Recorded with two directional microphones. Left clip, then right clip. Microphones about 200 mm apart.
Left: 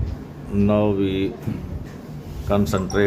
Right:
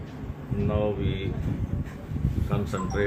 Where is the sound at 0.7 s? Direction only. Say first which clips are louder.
Left 8 dB; 65° left (ahead or behind).